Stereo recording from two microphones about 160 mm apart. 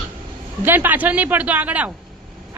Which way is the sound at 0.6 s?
10° right (ahead or behind).